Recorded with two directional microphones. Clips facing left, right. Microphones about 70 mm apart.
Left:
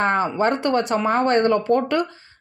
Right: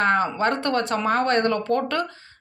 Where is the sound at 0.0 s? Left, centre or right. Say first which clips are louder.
Left 1 dB; left.